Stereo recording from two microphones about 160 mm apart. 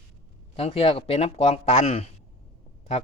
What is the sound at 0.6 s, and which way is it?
Speech, 40° left (ahead or behind).